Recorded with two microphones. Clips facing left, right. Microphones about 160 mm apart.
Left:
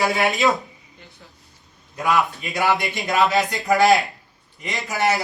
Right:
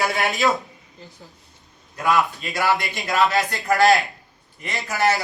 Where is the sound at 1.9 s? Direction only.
20° left (ahead or behind).